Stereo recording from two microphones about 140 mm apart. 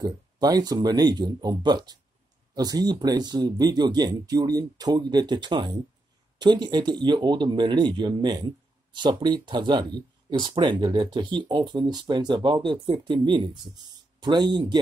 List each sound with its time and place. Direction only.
0.0 s speech: 30° right (ahead or behind)